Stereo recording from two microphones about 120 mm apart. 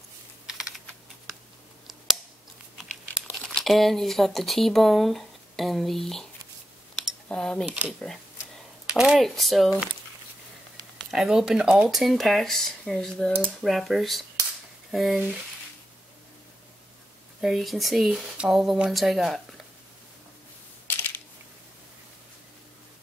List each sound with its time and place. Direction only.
0.5 s computer keyboard: 5° right (ahead or behind)
3.3 s speech: centre (ahead or behind)
7.0 s a sound: 5° left (ahead or behind)
8.9 s speech: 5° right (ahead or behind)
11.1 s speech: 5° right (ahead or behind)
17.4 s speech: centre (ahead or behind)
20.8 s a sound: 20° left (ahead or behind)